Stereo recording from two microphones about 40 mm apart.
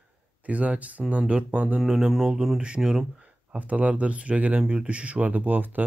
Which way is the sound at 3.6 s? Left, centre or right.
Right.